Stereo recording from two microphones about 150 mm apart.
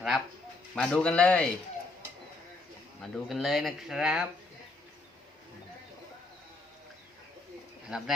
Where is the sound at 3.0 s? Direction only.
Centre (ahead or behind).